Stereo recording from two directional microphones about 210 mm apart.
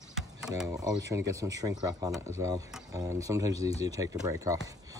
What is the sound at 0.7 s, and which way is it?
Speech, 15° right (ahead or behind).